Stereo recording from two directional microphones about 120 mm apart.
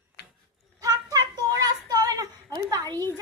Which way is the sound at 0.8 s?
30° right (ahead or behind).